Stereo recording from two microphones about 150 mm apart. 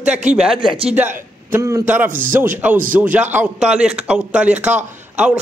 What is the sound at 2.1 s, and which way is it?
Speech, 65° right (ahead or behind).